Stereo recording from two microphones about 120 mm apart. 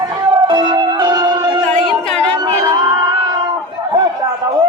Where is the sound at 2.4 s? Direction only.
30° right (ahead or behind).